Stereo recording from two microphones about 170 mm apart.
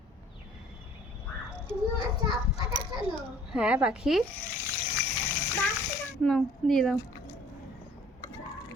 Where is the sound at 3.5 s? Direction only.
5° right (ahead or behind).